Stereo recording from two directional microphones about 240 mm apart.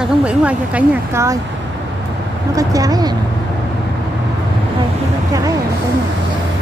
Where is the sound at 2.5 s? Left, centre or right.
Centre.